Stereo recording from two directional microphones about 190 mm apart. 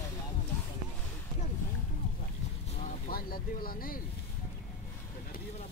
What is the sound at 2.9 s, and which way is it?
Speech, 50° left (ahead or behind).